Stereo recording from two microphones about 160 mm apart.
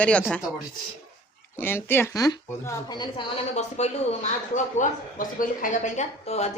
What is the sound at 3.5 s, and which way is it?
A woman's voice, 45° left (ahead or behind).